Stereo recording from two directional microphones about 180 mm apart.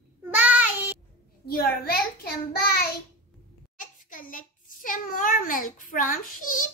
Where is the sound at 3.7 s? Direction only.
50° left (ahead or behind).